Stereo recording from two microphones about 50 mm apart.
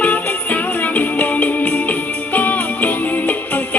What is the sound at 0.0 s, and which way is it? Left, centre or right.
Music, left.